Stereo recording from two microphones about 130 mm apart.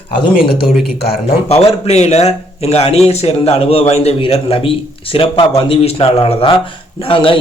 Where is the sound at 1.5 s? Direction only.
50° left (ahead or behind).